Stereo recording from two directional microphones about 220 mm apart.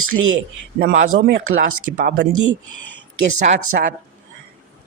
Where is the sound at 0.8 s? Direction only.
50° right (ahead or behind).